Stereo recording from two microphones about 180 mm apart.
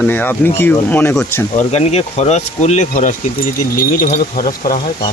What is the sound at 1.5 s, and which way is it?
Speech, 40° left (ahead or behind).